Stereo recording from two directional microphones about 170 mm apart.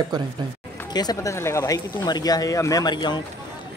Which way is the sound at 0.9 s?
25° left (ahead or behind).